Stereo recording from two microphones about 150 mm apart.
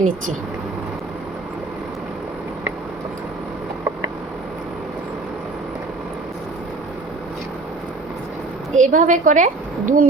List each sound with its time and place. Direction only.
8.7 s a woman's voice: 55° right (ahead or behind)